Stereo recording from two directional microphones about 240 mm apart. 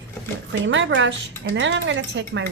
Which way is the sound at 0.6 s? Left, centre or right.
Right.